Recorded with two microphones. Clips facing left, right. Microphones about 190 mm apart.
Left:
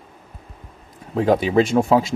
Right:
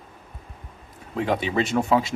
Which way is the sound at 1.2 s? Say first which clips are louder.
Left 7 dB; 40° left (ahead or behind).